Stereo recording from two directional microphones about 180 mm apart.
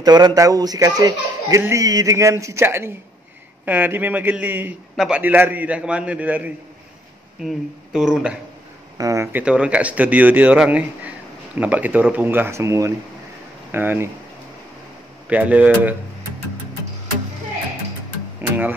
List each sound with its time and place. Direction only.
0.0 s a man's voice: 20° right (ahead or behind); by 8.4 s 5° right (ahead or behind)
8.9 s a man's voice: 20° right (ahead or behind)
15.2 s a man's voice: 10° right (ahead or behind)